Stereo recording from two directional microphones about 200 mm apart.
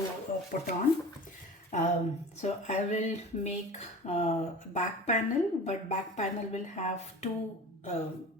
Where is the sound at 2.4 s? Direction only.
35° left (ahead or behind).